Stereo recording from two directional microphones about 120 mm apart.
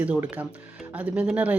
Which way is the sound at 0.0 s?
10° right (ahead or behind).